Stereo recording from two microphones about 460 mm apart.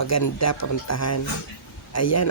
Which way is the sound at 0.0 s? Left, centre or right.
Left.